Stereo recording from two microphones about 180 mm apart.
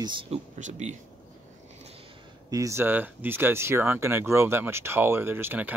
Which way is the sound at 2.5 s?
15° right (ahead or behind).